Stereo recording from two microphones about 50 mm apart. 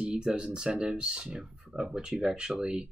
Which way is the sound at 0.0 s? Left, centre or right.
Centre.